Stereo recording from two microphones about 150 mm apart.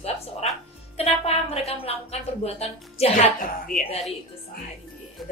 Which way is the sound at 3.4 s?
65° left (ahead or behind).